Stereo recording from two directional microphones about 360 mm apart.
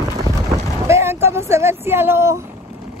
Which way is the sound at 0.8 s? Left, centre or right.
Centre.